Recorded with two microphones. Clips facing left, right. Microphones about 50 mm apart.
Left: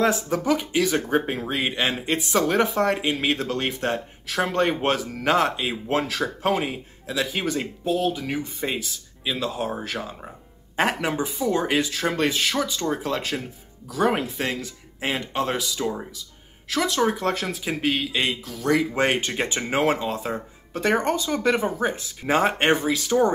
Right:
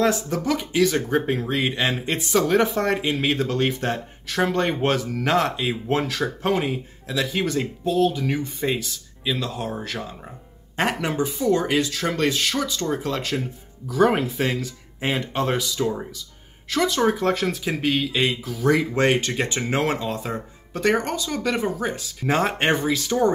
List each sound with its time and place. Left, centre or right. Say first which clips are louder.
0.0 s speech: even; centre
18.9 s speech: right 2 dB; centre
20.9 s speech: left 1 dB; left
22.2 s speech: left 1 dB; centre